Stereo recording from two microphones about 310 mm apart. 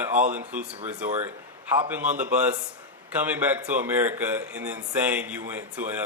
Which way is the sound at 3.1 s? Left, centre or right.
Centre.